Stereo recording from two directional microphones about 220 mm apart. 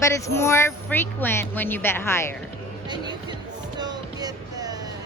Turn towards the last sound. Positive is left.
turn(degrees=-15)  # may be behind; listen again after turning